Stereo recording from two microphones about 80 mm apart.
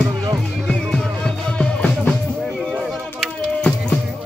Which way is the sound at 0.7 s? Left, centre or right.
Centre.